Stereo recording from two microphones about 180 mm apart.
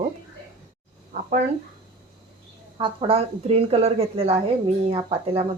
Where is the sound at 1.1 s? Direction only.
40° right (ahead or behind).